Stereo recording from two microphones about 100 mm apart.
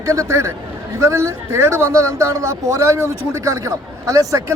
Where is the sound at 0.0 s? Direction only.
30° right (ahead or behind).